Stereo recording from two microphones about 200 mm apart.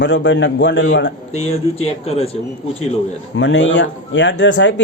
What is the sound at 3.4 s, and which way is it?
Speech, 65° left (ahead or behind).